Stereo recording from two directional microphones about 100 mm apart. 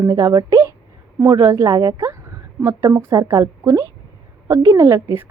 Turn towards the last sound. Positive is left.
turn(degrees=-30)  # may be behind; listen again after turning